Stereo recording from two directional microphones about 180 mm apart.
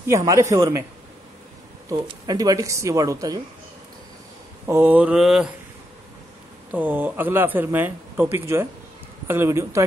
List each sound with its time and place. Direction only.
0.0 s speech: 15° right (ahead or behind)
1.9 s a woman's voice: 20° right (ahead or behind)
4.6 s speech: 10° right (ahead or behind)
6.7 s speech: 10° right (ahead or behind)